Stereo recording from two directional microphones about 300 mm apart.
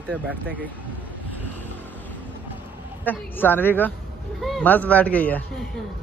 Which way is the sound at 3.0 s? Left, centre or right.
Centre.